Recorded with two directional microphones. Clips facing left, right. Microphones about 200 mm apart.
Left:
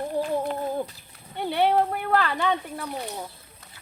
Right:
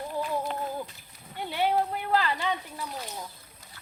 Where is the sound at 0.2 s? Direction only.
55° left (ahead or behind).